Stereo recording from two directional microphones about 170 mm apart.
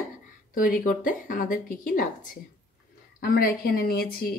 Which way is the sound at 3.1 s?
60° left (ahead or behind).